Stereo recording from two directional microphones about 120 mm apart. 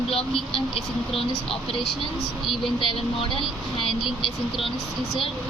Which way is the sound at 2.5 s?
50° left (ahead or behind).